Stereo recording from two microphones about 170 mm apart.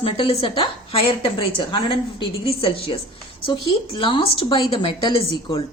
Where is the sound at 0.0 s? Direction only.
35° left (ahead or behind).